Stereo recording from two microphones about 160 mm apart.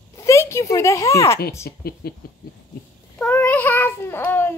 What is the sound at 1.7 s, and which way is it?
Speech, 80° left.